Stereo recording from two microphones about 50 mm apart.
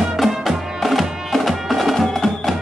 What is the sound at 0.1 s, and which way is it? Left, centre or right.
Music, centre.